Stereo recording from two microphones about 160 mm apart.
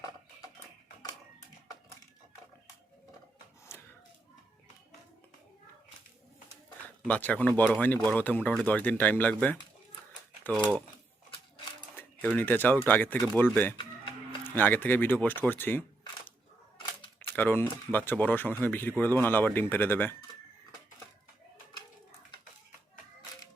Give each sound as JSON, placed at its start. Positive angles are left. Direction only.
{"t": 7.1, "sound": "speech", "side_deg": 10}
{"t": 11.9, "sound": "speech", "side_deg": 10}
{"t": 17.2, "sound": "speech", "side_deg": 10}